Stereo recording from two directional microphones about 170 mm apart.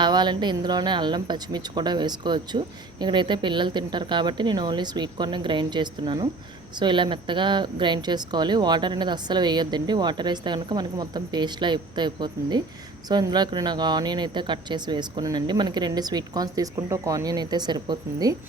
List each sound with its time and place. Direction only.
0.0 s speech: 25° right (ahead or behind)